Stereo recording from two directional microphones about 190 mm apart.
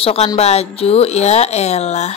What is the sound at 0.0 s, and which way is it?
Speech, 30° left (ahead or behind).